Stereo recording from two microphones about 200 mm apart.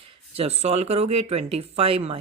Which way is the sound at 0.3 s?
30° right (ahead or behind).